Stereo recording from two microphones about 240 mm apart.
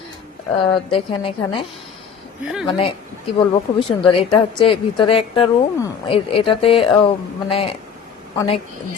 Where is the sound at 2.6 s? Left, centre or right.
Left.